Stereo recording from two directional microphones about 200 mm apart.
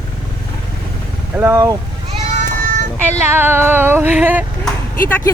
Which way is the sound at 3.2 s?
10° right (ahead or behind).